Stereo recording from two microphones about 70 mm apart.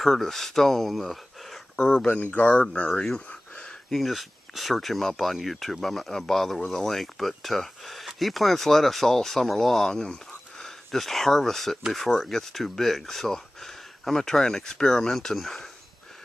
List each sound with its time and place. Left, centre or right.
0.0 s speech: centre
2.3 s speech: centre
3.5 s speech: centre